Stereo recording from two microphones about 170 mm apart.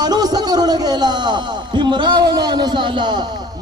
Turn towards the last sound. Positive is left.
turn(degrees=-25)  # may be behind; listen again after turning